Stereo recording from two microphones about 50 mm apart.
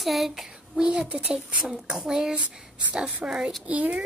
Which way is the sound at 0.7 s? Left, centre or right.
Centre.